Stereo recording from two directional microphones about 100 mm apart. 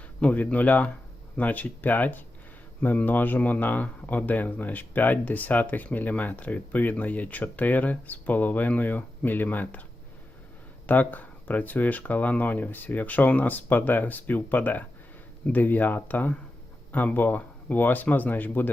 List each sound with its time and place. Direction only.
0.2 s speech: 15° left (ahead or behind)
10.8 s speech: 15° left (ahead or behind)